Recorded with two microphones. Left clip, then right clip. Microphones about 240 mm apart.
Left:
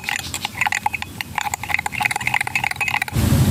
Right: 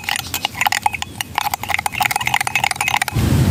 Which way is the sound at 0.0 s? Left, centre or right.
Centre.